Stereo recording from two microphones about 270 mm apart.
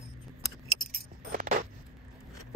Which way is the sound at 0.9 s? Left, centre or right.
Right.